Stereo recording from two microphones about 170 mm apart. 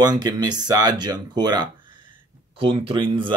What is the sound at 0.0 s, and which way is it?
Speech, 25° right (ahead or behind).